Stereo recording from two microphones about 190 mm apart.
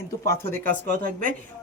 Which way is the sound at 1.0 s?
50° right (ahead or behind).